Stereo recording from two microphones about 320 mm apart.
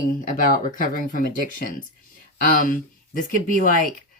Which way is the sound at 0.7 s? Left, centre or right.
Left.